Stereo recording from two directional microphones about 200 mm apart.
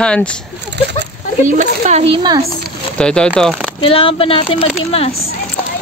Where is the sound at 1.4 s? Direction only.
40° right (ahead or behind); by 2.4 s 25° right (ahead or behind).